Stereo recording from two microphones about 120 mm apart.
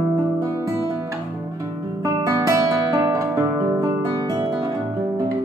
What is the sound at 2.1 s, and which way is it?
Guitar, 25° right (ahead or behind).